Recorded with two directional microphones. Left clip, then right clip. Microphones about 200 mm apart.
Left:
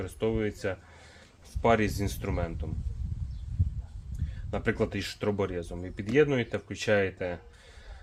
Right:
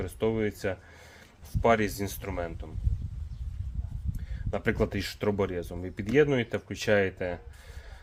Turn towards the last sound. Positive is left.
turn(degrees=-25)  # may be behind; listen again after turning